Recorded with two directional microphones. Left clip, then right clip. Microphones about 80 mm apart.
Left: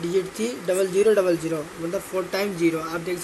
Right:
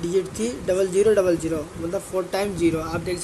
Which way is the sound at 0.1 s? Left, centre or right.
Right.